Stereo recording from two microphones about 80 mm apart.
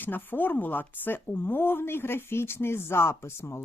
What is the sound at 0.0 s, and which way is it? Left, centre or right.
Speech, left.